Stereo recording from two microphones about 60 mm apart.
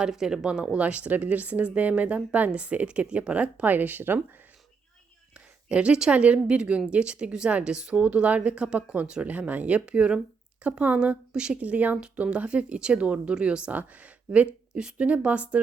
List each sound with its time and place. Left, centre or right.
0.0 s speech: centre; by 4.2 s right
5.6 s a woman's voice: centre